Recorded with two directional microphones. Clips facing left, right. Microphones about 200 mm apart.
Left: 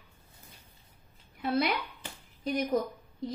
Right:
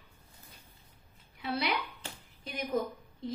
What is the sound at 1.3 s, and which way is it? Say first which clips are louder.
Speech: left 4 dB; 50° left (ahead or behind).